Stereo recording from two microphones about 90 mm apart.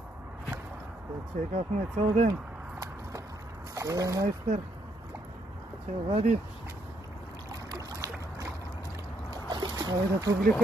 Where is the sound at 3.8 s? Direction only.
40° right (ahead or behind).